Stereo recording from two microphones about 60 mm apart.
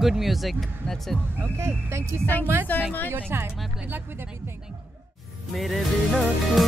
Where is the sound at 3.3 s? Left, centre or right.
Right.